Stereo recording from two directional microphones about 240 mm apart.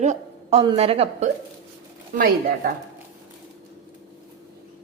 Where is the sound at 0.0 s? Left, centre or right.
Right.